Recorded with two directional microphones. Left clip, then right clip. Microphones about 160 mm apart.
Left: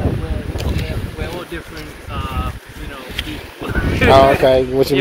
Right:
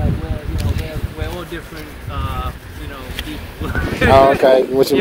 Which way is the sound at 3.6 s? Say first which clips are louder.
Left 1 dB; 5° right (ahead or behind).